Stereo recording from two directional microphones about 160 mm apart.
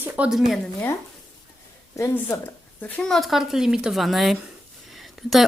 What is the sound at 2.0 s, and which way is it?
Speech, 20° left (ahead or behind).